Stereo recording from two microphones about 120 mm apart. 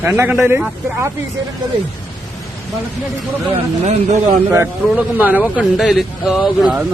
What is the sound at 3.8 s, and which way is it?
Speech, 65° right (ahead or behind).